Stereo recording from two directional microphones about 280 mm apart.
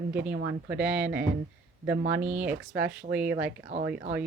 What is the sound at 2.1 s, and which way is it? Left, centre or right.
Speech, centre.